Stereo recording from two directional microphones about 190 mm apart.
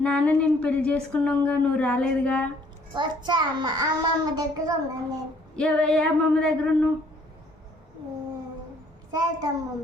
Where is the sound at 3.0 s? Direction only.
25° right (ahead or behind).